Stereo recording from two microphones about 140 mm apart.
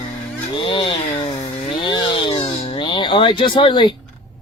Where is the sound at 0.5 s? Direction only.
35° left (ahead or behind).